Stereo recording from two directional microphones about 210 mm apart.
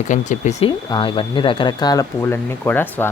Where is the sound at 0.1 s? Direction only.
35° left (ahead or behind).